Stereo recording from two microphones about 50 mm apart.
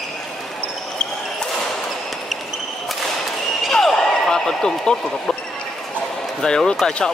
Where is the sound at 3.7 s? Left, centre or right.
Centre.